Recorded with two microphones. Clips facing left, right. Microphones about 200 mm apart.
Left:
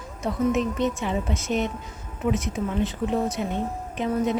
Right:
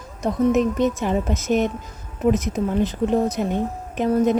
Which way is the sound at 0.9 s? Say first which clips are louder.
Right 5 dB; 40° right (ahead or behind).